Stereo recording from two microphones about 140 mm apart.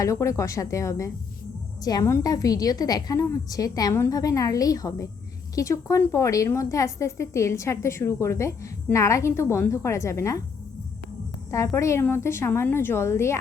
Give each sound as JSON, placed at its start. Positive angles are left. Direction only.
{"t": 0.0, "sound": "a woman's voice", "side_deg": 20}
{"t": 11.5, "sound": "a woman's voice", "side_deg": 20}